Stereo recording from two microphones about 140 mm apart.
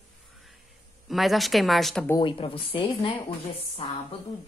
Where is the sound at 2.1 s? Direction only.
35° left (ahead or behind).